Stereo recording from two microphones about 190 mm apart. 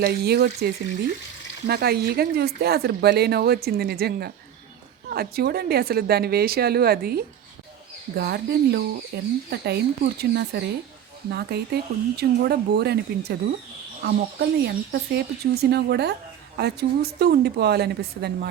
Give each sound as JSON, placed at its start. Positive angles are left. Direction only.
{"t": 0.0, "sound": "speech", "side_deg": -55}